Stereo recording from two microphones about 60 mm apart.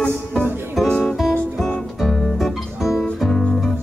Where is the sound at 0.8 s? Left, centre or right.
Centre.